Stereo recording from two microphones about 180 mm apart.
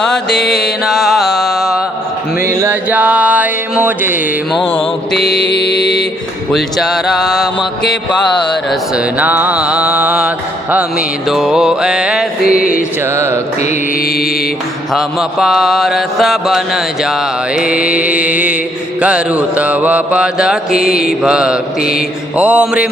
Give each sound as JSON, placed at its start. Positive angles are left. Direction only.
{"t": 0.0, "sound": "music", "side_deg": 5}
{"t": 2.5, "sound": "music", "side_deg": -15}
{"t": 5.1, "sound": "mantra", "side_deg": 65}
{"t": 6.5, "sound": "mantra", "side_deg": 0}
{"t": 8.7, "sound": "mantra", "side_deg": -10}
{"t": 12.5, "sound": "music", "side_deg": 50}
{"t": 13.1, "sound": "mantra", "side_deg": -15}
{"t": 14.9, "sound": "mantra", "side_deg": 0}
{"t": 20.9, "sound": "music", "side_deg": 55}
{"t": 21.2, "sound": "mantra", "side_deg": -5}
{"t": 21.8, "sound": "mantra", "side_deg": 55}
{"t": 22.4, "sound": "mantra", "side_deg": -5}